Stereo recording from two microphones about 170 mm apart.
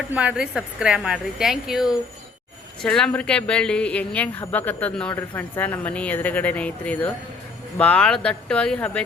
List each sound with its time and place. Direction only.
0.1 s a woman's voice: 5° right (ahead or behind)